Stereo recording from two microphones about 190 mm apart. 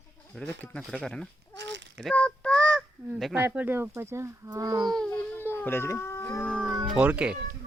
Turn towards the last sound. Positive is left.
turn(degrees=-5)  # may be behind; listen again after turning